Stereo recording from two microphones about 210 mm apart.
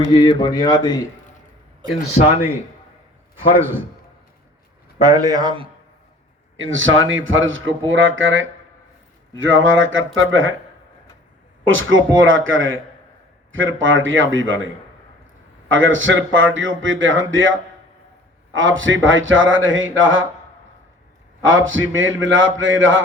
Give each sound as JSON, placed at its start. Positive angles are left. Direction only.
{"t": 0.2, "sound": "speech", "side_deg": 20}
{"t": 3.6, "sound": "speech", "side_deg": -10}
{"t": 4.9, "sound": "speech", "side_deg": -15}
{"t": 6.6, "sound": "a man's voice", "side_deg": -65}
{"t": 11.6, "sound": "a man's voice", "side_deg": -70}
{"t": 15.7, "sound": "a man's voice", "side_deg": -65}
{"t": 18.5, "sound": "a man's voice", "side_deg": -65}
{"t": 21.4, "sound": "a man's voice", "side_deg": -65}